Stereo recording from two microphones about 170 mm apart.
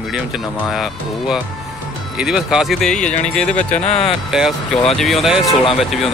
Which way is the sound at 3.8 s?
35° left (ahead or behind).